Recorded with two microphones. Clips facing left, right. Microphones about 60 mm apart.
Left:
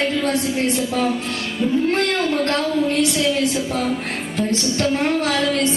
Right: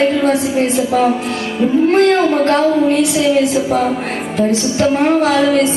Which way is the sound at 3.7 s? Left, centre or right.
Centre.